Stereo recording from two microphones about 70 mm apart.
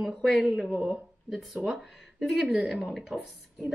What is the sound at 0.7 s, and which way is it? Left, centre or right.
Speech, centre.